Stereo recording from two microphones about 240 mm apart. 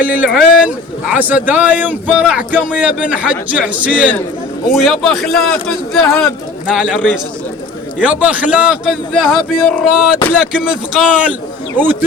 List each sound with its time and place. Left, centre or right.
0.0 s a man's voice: centre